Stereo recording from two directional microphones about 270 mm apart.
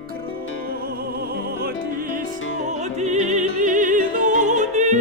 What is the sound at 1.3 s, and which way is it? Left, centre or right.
Music, right.